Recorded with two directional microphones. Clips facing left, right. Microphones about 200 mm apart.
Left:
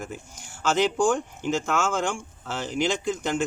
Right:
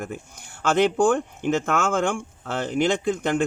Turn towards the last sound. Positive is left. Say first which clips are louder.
# right 4 dB
turn(degrees=-55)  # may be behind; listen again after turning